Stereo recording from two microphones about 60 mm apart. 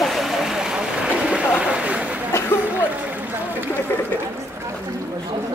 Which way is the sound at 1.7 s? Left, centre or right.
Centre.